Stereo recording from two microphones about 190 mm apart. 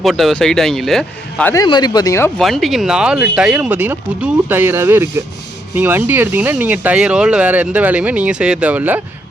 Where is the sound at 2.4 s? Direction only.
Centre (ahead or behind).